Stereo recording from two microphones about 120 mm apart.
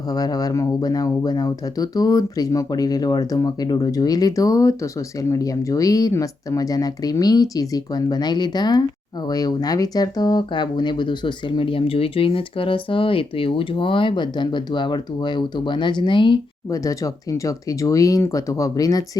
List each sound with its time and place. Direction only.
0.1 s speech: 30° left (ahead or behind)
16.6 s speech: 30° left (ahead or behind)